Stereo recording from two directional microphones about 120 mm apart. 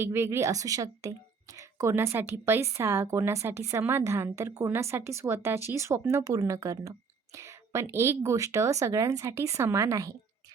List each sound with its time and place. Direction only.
0.0 s a woman's voice: 20° right (ahead or behind)